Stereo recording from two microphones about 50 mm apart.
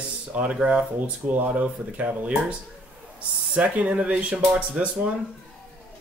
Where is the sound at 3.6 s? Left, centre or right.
Right.